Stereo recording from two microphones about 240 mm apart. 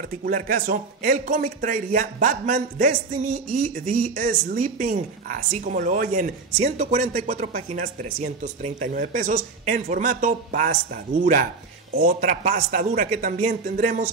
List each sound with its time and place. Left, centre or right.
0.2 s speech: right
12.0 s speech: right